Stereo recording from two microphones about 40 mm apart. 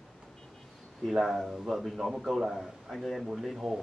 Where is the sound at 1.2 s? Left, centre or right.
Centre.